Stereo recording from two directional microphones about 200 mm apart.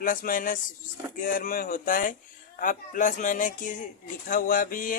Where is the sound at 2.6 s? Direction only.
40° left (ahead or behind).